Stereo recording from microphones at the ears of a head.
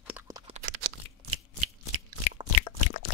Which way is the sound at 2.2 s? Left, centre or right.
Left.